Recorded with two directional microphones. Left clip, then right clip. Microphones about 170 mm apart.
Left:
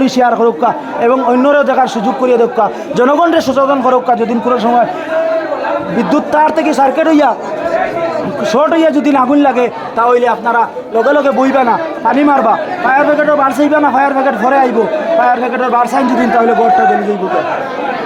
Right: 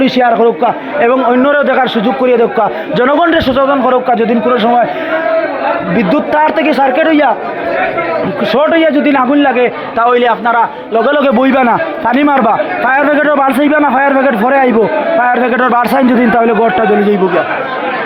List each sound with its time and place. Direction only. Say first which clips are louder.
0.0 s a man's voice: right 1 dB; 10° left (ahead or behind)
6.0 s a man's voice: even; centre (ahead or behind); by 7.3 s 15° left (ahead or behind)
8.5 s a man's voice: right 1 dB; 10° left (ahead or behind)
10.0 s a man's voice: right 1 dB; 10° right (ahead or behind)
15.5 s speech: right 2 dB; 35° right (ahead or behind)